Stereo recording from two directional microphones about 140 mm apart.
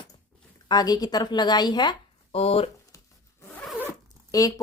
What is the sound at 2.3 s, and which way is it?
Speech, 45° left (ahead or behind).